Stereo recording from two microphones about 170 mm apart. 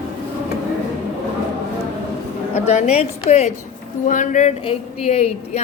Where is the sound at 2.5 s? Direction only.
40° left (ahead or behind).